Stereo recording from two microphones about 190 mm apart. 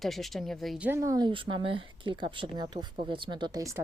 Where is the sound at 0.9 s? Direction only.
15° right (ahead or behind).